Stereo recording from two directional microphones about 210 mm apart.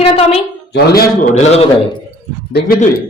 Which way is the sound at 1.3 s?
30° left (ahead or behind).